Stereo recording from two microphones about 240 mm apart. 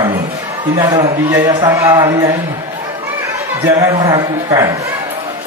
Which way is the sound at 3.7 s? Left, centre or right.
Centre.